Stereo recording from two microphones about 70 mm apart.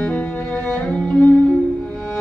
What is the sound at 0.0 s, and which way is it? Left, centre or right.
Music, centre.